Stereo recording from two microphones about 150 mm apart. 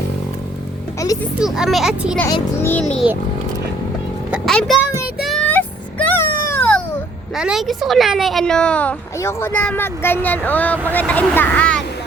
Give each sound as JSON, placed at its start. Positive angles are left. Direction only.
{"t": 0.9, "sound": "music", "side_deg": 20}
{"t": 1.4, "sound": "speech", "side_deg": -5}
{"t": 2.2, "sound": "speech", "side_deg": 20}
{"t": 4.3, "sound": "a sound", "side_deg": 0}
{"t": 5.2, "sound": "music", "side_deg": 0}
{"t": 7.3, "sound": "speech", "side_deg": -5}